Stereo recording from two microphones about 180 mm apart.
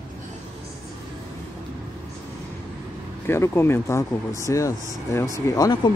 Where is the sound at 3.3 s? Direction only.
15° left (ahead or behind).